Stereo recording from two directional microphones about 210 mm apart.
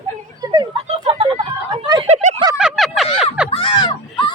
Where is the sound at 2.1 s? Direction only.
35° right (ahead or behind).